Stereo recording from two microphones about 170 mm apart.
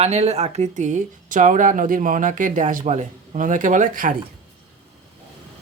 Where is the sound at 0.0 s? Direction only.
40° right (ahead or behind).